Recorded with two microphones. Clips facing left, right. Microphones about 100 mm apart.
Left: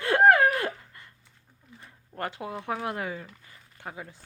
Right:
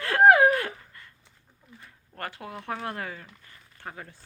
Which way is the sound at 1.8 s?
20° left (ahead or behind).